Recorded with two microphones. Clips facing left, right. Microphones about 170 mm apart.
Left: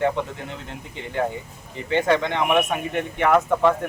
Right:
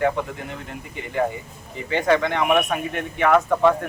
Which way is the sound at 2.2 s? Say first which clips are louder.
Right 1 dB; 20° left (ahead or behind).